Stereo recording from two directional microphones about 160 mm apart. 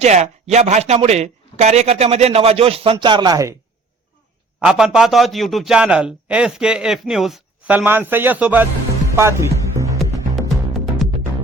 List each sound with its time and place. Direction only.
0.0 s speech: 45° right (ahead or behind); by 3.5 s 25° right (ahead or behind)
4.6 s a man's voice: 5° right (ahead or behind)
9.7 s music: 20° right (ahead or behind)
10.8 s music: centre (ahead or behind)